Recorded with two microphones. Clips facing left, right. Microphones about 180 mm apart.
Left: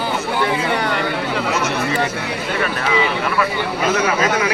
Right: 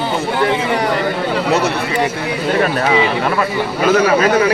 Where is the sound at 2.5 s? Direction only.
40° right (ahead or behind).